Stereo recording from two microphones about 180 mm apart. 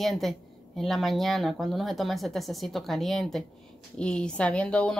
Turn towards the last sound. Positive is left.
turn(degrees=5)  # may be behind; listen again after turning